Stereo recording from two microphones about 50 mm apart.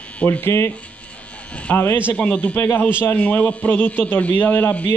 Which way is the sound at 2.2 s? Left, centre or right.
Left.